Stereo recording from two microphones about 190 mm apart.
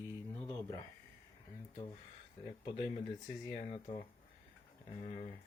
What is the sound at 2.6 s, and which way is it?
Speech, 25° left (ahead or behind).